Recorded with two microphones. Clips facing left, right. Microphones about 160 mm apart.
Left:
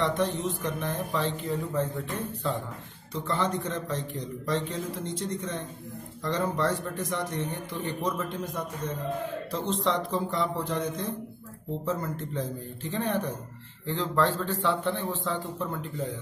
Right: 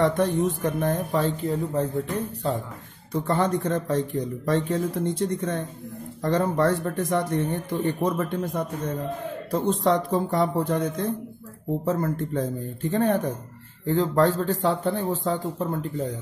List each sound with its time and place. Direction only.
0.0 s speech: 50° right (ahead or behind)
3.1 s speech: 50° right (ahead or behind)